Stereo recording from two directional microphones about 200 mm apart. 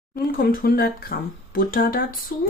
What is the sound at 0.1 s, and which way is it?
Speech, 45° left (ahead or behind).